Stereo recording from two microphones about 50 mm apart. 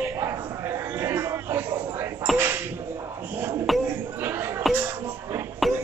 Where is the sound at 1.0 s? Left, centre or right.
Right.